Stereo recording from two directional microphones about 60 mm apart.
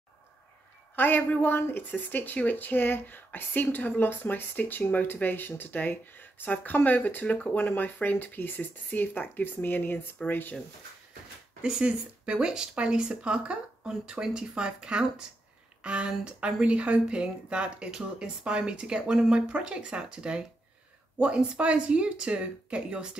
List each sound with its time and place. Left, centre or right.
0.9 s a woman's voice: left
11.6 s speech: centre